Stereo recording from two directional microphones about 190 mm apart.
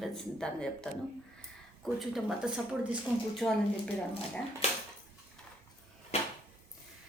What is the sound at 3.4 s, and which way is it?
Speech, 10° left (ahead or behind).